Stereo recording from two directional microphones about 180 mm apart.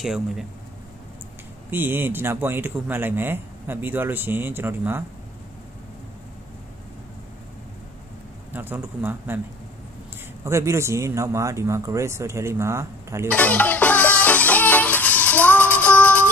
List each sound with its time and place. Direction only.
0.0 s speech: centre (ahead or behind)
1.7 s speech: 10° right (ahead or behind)
8.5 s speech: 10° right (ahead or behind)
10.4 s speech: 15° right (ahead or behind)
13.3 s music: 10° left (ahead or behind)